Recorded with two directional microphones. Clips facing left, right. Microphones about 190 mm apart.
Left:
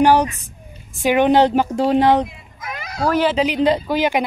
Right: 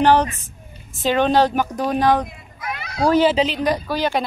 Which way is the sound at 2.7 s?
45° left (ahead or behind).